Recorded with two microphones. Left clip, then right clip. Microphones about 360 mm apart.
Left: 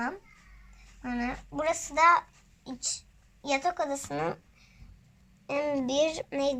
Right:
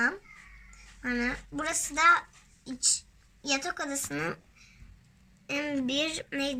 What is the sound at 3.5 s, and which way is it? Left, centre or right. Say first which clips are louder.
Speech: left 4 dB; centre.